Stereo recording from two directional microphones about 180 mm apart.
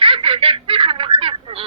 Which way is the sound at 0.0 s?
30° right (ahead or behind).